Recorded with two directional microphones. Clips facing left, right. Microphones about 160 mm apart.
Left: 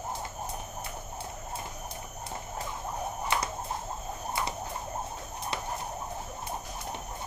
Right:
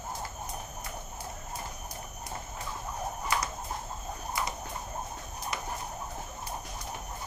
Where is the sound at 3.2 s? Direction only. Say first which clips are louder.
Left 1 dB; 25° left (ahead or behind).